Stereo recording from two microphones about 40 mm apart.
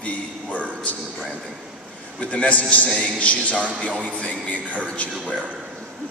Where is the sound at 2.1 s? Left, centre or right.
Left.